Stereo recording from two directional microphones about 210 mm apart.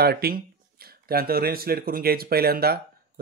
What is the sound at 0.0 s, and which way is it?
Speech, 50° right (ahead or behind).